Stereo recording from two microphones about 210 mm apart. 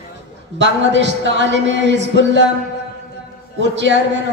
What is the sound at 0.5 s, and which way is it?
A man's voice, 60° right (ahead or behind).